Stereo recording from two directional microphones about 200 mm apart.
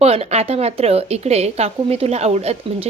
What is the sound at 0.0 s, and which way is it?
A woman's voice, 30° right (ahead or behind).